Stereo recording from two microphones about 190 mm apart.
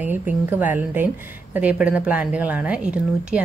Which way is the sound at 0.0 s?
10° right (ahead or behind).